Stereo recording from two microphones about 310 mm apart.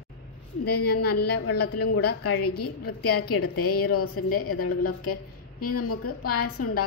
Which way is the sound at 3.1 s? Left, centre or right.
Left.